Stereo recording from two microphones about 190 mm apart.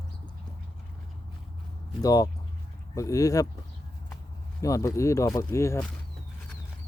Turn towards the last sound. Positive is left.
turn(degrees=15)  # may be behind; listen again after turning